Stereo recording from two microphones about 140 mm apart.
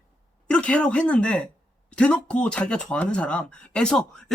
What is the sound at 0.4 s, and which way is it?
Speech, 10° left (ahead or behind).